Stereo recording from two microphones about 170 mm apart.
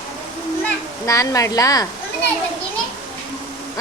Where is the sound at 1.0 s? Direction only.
20° left (ahead or behind).